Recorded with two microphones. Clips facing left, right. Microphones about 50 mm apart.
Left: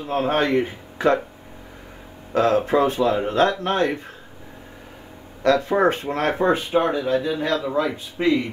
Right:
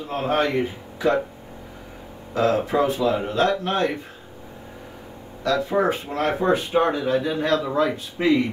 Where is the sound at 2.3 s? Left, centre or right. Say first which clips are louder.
Left 2 dB; left.